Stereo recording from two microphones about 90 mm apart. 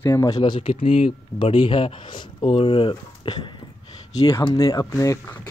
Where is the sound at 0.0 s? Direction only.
30° left (ahead or behind).